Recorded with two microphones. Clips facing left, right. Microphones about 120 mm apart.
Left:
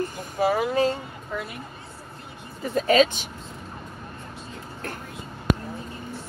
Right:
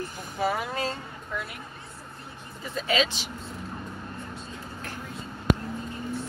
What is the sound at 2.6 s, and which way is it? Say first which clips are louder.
Speech: left 8 dB; 45° left (ahead or behind).